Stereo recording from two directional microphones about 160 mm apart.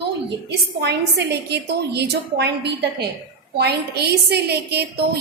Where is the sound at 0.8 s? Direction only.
90° right.